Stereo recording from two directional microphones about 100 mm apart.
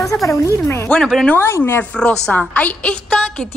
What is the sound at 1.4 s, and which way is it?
Speech, 25° left (ahead or behind).